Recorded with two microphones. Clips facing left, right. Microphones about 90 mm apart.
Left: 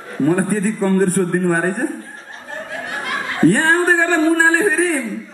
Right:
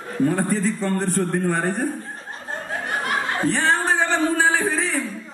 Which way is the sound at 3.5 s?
50° left (ahead or behind).